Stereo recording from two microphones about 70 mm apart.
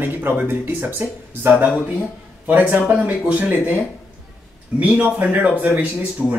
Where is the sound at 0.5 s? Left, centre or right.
Right.